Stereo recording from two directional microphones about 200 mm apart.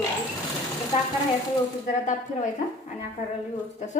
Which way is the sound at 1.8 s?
40° left (ahead or behind).